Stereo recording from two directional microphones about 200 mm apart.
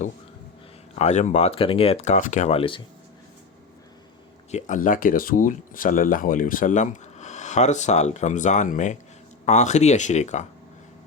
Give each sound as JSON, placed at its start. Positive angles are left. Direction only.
{"t": 0.9, "sound": "speech", "side_deg": 35}
{"t": 4.5, "sound": "speech", "side_deg": 40}